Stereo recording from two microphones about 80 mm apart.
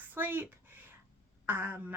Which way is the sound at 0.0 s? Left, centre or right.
Right.